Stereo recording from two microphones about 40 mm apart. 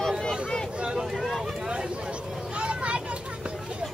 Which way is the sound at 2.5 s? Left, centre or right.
Right.